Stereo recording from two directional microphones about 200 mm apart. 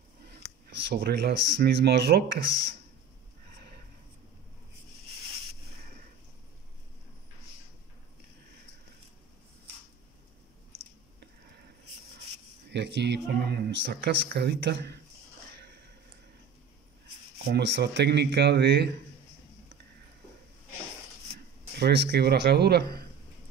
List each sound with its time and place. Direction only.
0.8 s speech: 55° right (ahead or behind)
12.7 s speech: 60° right (ahead or behind)
17.5 s speech: 60° right (ahead or behind)
21.7 s speech: 55° right (ahead or behind)